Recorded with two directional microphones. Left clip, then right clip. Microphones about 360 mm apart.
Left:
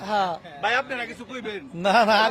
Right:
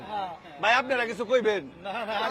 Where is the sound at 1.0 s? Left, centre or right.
Right.